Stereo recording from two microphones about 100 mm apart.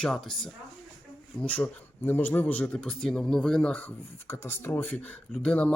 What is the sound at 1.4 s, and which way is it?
Speech, 15° left (ahead or behind).